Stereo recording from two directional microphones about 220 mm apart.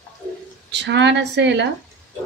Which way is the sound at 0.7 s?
50° right (ahead or behind).